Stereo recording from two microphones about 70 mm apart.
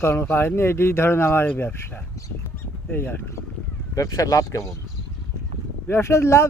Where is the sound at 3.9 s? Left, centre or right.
Left.